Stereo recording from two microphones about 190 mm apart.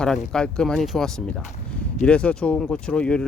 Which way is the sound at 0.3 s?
5° left (ahead or behind).